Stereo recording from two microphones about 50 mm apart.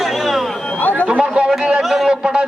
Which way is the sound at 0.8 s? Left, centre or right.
Left.